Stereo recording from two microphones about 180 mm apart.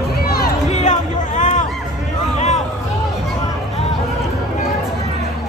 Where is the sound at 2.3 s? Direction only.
40° left (ahead or behind).